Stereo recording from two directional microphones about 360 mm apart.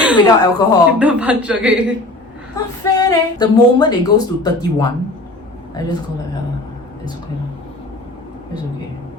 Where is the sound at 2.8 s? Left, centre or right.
Centre.